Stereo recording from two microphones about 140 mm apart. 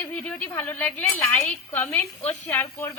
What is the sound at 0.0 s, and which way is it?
Speech, 10° left (ahead or behind).